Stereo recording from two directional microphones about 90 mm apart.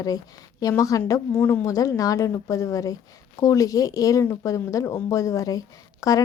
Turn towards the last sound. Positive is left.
turn(degrees=40)  # may be behind; listen again after turning